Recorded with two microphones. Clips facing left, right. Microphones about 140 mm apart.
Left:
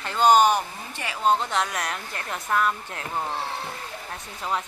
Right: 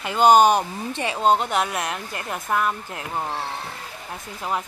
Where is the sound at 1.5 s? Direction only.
10° right (ahead or behind).